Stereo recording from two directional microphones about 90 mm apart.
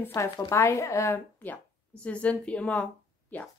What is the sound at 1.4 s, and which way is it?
A woman's voice, 20° left (ahead or behind).